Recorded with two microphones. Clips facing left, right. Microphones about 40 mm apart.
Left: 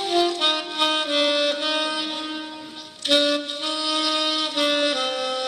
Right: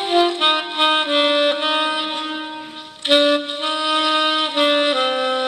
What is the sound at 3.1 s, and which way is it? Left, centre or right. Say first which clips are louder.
Music: right 5 dB; right.